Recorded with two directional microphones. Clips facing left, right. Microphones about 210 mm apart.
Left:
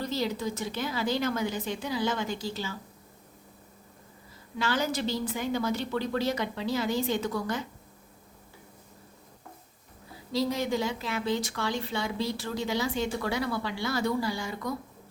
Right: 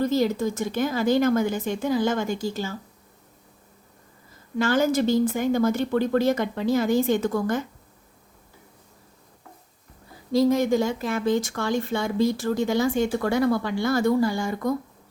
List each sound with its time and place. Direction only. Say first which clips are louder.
0.0 s speech: right 8 dB; 50° right (ahead or behind)
4.5 s speech: right 8 dB; 50° right (ahead or behind)
10.3 s speech: right 8 dB; 50° right (ahead or behind)